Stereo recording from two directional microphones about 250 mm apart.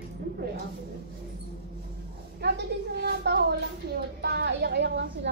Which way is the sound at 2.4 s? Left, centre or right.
Right.